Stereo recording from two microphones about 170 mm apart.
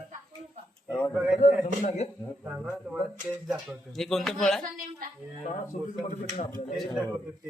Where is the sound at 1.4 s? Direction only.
40° left (ahead or behind).